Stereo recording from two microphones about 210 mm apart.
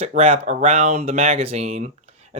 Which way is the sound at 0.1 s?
30° right (ahead or behind).